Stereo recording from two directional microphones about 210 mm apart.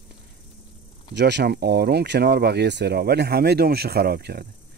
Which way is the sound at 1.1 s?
55° right (ahead or behind).